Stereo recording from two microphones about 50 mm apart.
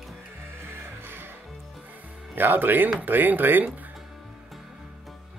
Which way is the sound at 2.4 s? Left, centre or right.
Right.